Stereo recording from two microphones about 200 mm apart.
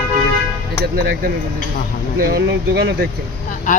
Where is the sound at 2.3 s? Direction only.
60° right (ahead or behind).